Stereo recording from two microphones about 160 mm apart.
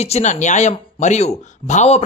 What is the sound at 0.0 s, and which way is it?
A man's voice, 45° left (ahead or behind).